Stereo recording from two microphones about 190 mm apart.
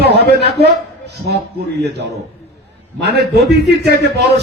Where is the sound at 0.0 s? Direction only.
60° right (ahead or behind).